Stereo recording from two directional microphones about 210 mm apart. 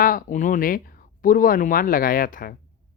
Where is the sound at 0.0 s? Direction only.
40° left (ahead or behind).